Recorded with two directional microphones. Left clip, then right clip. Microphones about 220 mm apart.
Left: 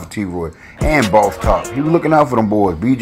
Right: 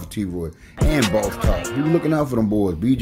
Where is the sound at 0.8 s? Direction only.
Centre (ahead or behind).